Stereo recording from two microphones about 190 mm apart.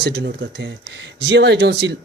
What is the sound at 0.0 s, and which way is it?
Speech, 60° right (ahead or behind).